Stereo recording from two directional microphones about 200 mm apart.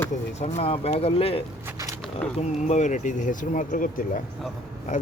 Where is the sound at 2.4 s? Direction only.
35° left (ahead or behind).